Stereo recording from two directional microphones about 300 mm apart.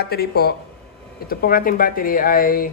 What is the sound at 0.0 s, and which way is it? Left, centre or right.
Speech, left.